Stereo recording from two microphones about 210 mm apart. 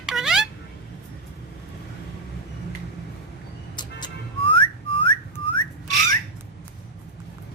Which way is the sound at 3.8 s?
20° left (ahead or behind).